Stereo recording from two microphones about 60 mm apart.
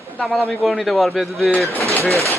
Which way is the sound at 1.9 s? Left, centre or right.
Right.